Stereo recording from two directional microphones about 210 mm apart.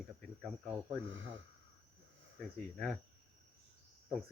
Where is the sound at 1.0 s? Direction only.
65° right (ahead or behind).